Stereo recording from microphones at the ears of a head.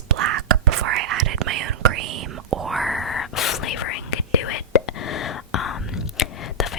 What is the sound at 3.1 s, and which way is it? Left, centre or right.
Whispering, left.